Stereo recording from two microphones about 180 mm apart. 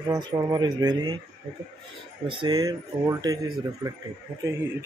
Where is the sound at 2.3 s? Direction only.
25° right (ahead or behind).